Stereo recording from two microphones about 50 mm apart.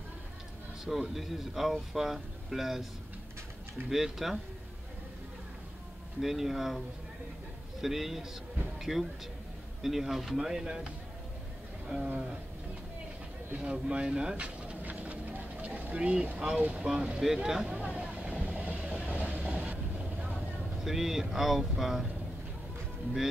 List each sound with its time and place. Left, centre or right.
1.1 s speech: centre
3.9 s speech: centre
6.2 s speech: centre
7.8 s speech: centre
11.9 s speech: centre
13.6 s speech: right
14.3 s a sound: right
16.3 s speech: right
17.7 s vehicle: right
20.3 s speech: centre